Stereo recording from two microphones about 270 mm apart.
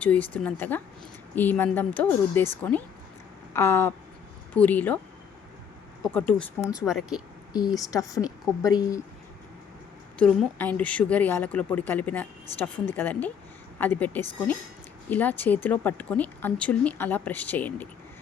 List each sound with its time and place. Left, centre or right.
0.0 s speech: centre
3.5 s speech: centre
6.0 s speech: centre
7.8 s speech: centre
10.2 s speech: centre